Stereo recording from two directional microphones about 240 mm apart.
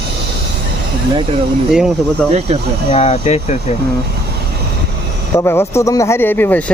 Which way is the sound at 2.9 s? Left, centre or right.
Left.